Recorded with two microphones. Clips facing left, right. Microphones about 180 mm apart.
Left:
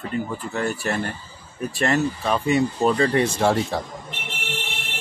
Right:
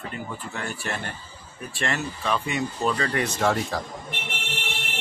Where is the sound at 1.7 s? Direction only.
40° left (ahead or behind).